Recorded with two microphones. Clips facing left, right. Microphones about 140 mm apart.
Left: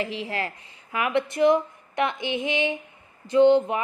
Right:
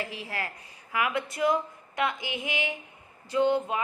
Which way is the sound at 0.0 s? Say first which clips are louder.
Left 6 dB; 20° left (ahead or behind).